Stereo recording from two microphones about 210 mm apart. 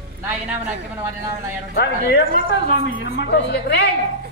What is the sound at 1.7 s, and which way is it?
Speech, 45° left (ahead or behind).